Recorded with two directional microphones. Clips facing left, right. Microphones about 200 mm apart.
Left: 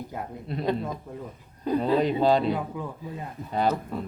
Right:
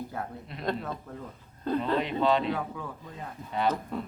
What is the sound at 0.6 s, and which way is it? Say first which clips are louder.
A man's voice: left 4 dB; 10° left (ahead or behind).